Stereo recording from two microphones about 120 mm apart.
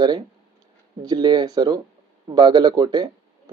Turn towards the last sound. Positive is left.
turn(degrees=-35)  # may be behind; listen again after turning